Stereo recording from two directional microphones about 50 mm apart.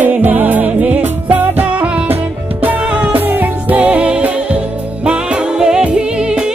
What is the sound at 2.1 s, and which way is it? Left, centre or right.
Music, right.